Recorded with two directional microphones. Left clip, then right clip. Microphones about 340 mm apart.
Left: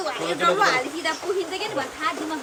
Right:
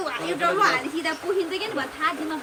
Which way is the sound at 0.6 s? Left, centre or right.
Centre.